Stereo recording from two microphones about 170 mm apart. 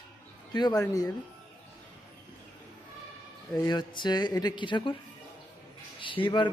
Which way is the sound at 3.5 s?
25° left (ahead or behind).